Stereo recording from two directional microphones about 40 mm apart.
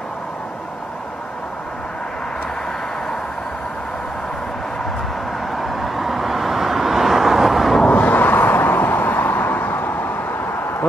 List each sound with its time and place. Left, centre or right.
5.6 s vehicle: centre
7.9 s vehicle: left